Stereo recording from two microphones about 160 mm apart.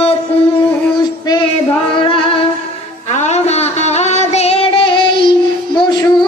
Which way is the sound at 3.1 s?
45° left (ahead or behind).